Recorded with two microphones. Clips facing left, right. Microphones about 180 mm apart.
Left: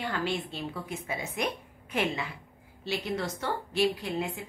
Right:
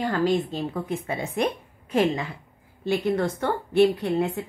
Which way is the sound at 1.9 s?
35° right (ahead or behind).